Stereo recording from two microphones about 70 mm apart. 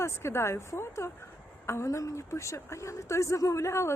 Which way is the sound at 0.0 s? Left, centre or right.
Left.